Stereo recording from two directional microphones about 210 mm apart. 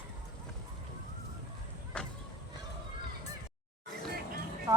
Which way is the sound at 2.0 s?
5° left (ahead or behind).